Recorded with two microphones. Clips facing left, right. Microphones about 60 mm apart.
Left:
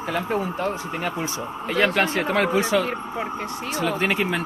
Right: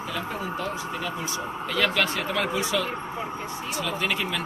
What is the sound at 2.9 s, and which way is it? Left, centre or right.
Speech, left.